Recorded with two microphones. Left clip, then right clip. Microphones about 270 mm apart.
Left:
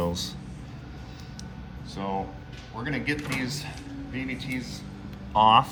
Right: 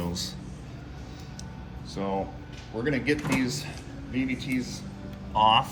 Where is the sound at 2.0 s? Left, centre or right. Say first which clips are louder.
Right 1 dB; left.